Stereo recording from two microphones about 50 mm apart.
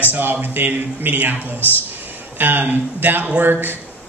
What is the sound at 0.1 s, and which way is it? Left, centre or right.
Speech, right.